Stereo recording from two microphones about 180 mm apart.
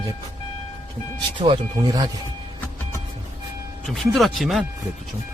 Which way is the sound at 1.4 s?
25° right (ahead or behind).